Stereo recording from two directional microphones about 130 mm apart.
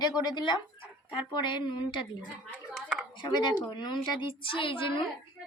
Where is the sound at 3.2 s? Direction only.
35° left (ahead or behind).